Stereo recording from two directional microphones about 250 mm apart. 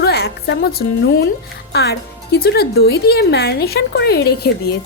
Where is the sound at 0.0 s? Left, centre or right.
Left.